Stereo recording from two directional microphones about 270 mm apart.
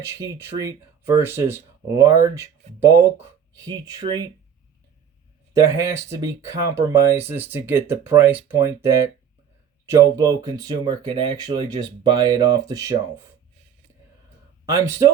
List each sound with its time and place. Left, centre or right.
0.1 s speech: centre
5.5 s speech: centre
14.7 s speech: centre